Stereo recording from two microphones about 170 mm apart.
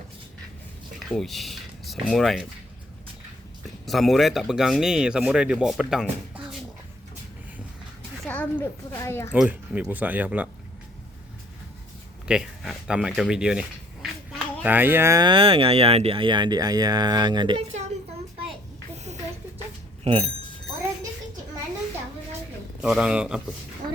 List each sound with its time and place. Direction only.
1.0 s speech: centre (ahead or behind)
3.8 s speech: centre (ahead or behind)
8.3 s speech: 10° left (ahead or behind)
9.3 s speech: 10° right (ahead or behind)
12.3 s speech: 5° right (ahead or behind); by 17.6 s 25° right (ahead or behind)
18.9 s a sound: 40° right (ahead or behind)
20.1 s speech: 35° right (ahead or behind)
22.8 s speech: 5° right (ahead or behind)